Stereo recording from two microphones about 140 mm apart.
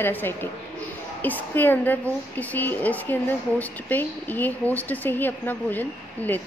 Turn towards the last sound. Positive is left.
turn(degrees=15)  # may be behind; listen again after turning